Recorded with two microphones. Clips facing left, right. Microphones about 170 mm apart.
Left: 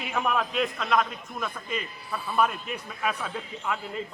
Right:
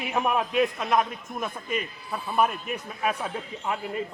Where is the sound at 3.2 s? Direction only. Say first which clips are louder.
Right 2 dB; 25° right (ahead or behind).